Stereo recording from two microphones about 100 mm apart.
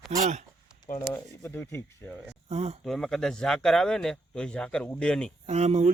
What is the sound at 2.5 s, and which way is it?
Speech, 90° right.